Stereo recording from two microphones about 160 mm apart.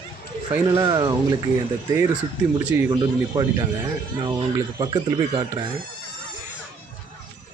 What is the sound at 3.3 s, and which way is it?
Speech, 25° right (ahead or behind).